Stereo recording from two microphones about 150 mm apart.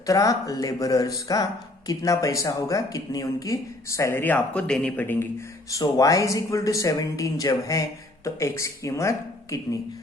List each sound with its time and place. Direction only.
0.0 s speech: 20° left (ahead or behind)
5.7 s speech: 20° left (ahead or behind)